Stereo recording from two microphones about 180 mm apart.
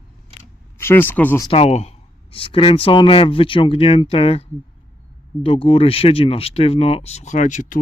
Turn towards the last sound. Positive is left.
turn(degrees=45)  # may be behind; listen again after turning